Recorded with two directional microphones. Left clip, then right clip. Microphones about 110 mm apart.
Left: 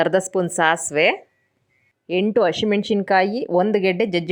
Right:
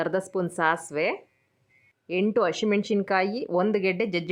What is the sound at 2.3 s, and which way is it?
Speech, 25° left (ahead or behind).